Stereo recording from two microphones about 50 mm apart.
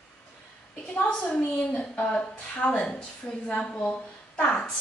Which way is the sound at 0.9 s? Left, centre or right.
Left.